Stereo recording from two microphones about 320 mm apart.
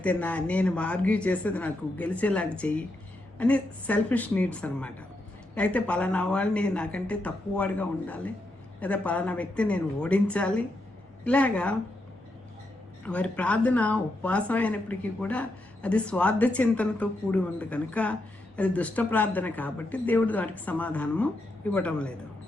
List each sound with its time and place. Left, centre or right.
0.0 s speech: centre
13.1 s speech: centre